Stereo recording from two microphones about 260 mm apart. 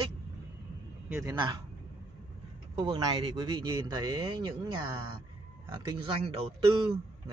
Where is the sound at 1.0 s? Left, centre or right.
Centre.